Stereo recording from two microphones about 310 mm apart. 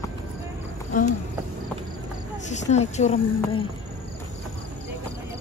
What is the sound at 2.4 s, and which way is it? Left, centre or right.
Speech, left.